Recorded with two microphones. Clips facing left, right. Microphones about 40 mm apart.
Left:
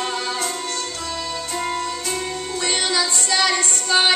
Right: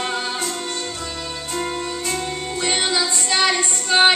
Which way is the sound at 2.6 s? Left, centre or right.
Right.